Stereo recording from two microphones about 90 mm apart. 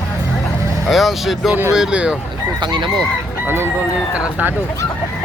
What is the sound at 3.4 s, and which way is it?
Chicken, 25° right (ahead or behind).